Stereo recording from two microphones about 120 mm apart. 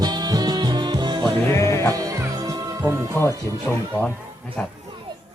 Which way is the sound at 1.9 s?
30° right (ahead or behind).